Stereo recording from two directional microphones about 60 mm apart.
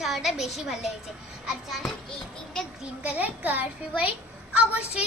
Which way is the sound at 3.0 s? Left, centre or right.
Right.